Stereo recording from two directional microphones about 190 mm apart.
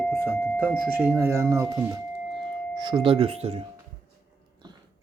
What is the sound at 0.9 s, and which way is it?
Speech, 5° right (ahead or behind).